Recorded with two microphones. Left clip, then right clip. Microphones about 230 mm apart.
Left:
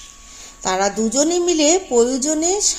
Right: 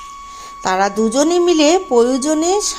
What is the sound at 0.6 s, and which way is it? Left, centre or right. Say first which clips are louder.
A woman's voice: right 4 dB; centre.